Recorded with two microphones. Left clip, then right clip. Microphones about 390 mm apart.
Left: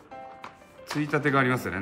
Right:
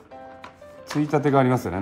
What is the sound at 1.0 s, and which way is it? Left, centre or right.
Speech, centre.